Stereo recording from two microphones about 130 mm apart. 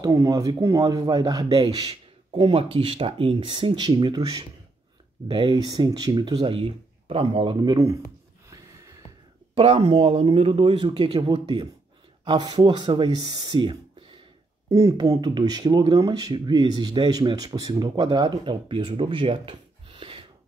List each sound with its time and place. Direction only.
0.0 s speech: 25° right (ahead or behind); by 7.7 s 40° right (ahead or behind)
7.7 s speech: 25° right (ahead or behind)
9.6 s speech: 45° right (ahead or behind)